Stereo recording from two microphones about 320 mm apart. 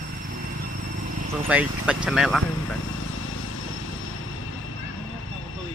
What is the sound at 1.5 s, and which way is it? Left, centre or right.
Speech, centre.